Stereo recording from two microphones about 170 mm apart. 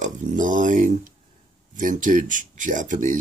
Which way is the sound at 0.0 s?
50° right (ahead or behind).